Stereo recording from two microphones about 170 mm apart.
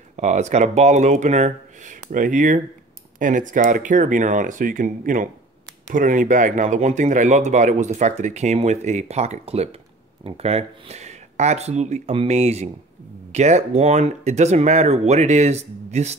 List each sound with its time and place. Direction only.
0.1 s speech: 45° right (ahead or behind)